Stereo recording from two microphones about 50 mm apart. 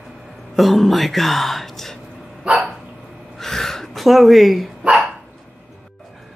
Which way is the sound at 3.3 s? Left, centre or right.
Centre.